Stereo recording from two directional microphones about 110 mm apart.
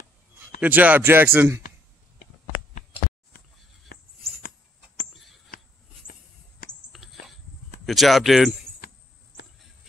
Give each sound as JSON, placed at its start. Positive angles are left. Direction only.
{"t": 0.6, "sound": "speech", "side_deg": -15}
{"t": 6.7, "sound": "a sound", "side_deg": 0}
{"t": 7.8, "sound": "speech", "side_deg": 0}